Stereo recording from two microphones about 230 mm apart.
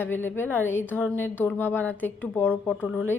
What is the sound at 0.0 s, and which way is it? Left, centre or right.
Speech, centre.